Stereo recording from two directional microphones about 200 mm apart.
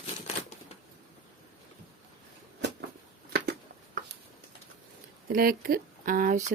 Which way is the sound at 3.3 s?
55° right (ahead or behind).